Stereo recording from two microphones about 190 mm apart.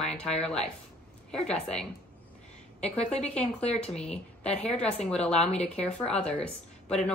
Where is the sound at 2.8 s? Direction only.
35° left (ahead or behind).